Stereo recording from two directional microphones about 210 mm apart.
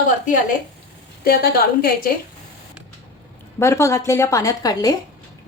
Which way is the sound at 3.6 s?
15° left (ahead or behind).